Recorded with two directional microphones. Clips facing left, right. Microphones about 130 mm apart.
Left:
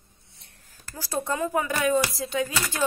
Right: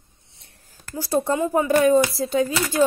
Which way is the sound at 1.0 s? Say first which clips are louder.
Right 6 dB; 30° right (ahead or behind).